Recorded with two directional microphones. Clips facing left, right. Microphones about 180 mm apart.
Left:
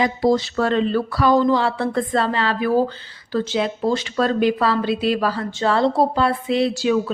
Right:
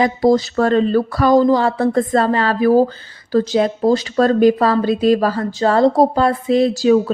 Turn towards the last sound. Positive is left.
turn(degrees=-40)  # may be behind; listen again after turning